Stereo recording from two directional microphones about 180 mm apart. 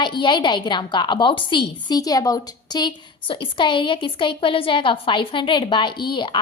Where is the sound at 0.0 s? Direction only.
25° left (ahead or behind).